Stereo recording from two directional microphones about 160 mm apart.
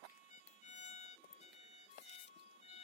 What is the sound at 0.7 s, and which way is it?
Music, 45° left (ahead or behind).